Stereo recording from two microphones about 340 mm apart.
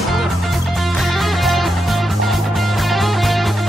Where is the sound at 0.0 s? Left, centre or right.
Centre.